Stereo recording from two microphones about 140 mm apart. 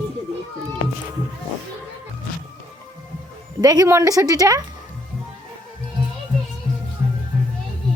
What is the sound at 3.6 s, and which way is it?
A woman's voice, 25° right (ahead or behind).